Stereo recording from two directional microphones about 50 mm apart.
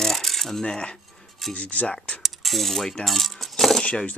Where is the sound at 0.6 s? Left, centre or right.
Left.